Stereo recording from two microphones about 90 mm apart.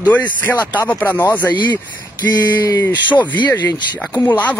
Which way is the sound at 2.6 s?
35° left (ahead or behind).